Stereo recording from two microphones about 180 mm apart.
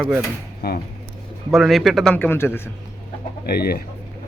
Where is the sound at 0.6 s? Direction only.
65° left (ahead or behind).